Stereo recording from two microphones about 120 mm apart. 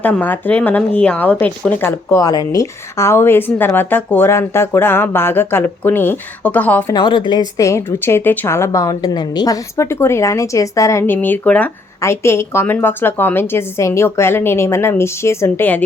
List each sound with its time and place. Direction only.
0.0 s speech: 15° left (ahead or behind)
6.9 s a woman's voice: 40° left (ahead or behind)
7.6 s a woman's voice: 25° left (ahead or behind)
12.0 s a woman's voice: 20° left (ahead or behind)